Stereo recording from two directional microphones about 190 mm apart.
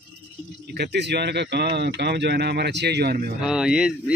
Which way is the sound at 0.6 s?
60° right (ahead or behind).